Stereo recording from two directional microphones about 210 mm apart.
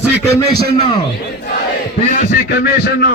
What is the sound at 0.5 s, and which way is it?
Speech, 45° right (ahead or behind).